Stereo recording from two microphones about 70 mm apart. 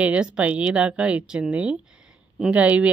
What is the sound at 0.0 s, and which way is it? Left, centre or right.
Speech, centre.